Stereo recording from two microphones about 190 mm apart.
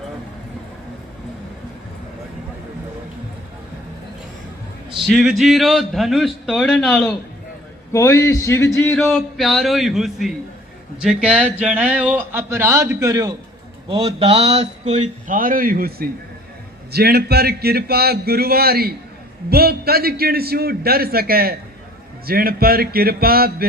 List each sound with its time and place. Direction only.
4.9 s a man's voice: centre (ahead or behind)
7.9 s a man's voice: 15° left (ahead or behind)
9.0 s a man's voice: centre (ahead or behind); by 13.3 s 15° right (ahead or behind)
13.8 s a man's voice: 30° right (ahead or behind); by 23.6 s 55° right (ahead or behind)